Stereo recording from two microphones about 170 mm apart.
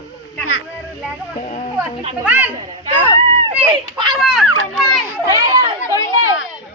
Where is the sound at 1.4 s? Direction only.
45° left (ahead or behind).